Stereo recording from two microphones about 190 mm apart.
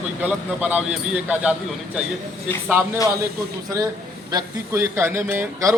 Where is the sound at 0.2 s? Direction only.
10° right (ahead or behind).